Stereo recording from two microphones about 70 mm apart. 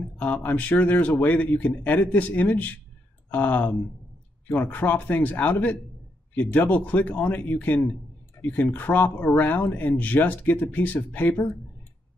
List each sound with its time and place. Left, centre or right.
0.2 s speech: left